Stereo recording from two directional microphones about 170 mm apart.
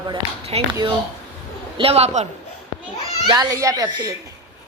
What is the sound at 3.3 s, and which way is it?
Speech, 20° right (ahead or behind).